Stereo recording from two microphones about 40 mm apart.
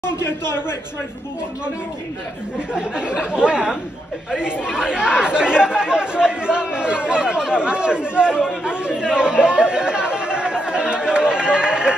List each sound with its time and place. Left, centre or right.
0.2 s a man's voice: left
2.7 s speech: right